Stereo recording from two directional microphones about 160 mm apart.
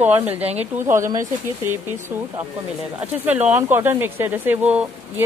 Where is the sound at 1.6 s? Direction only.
15° right (ahead or behind).